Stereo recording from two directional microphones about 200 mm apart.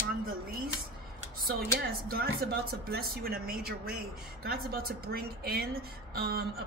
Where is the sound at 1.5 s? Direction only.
50° right (ahead or behind).